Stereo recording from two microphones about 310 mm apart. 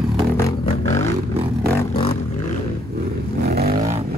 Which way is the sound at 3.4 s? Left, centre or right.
Right.